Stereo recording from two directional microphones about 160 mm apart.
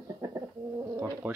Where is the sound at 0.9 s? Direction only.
15° right (ahead or behind).